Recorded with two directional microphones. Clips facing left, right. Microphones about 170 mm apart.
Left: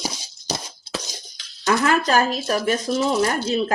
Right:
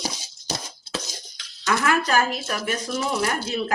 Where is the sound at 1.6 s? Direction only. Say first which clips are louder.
Left 3 dB; 30° left (ahead or behind).